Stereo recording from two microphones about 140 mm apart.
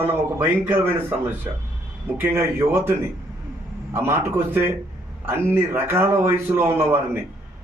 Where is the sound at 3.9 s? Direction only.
20° right (ahead or behind).